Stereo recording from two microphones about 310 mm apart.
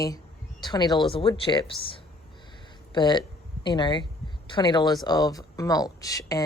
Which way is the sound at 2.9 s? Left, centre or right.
Centre.